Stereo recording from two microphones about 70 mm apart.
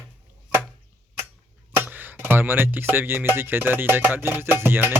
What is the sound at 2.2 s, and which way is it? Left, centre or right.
Music, right.